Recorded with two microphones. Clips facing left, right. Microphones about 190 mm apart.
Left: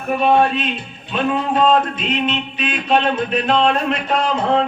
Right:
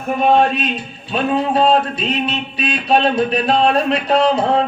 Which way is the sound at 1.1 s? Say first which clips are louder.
Right 2 dB; 35° right (ahead or behind).